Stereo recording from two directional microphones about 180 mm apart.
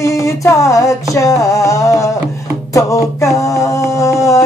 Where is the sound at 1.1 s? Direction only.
20° left (ahead or behind).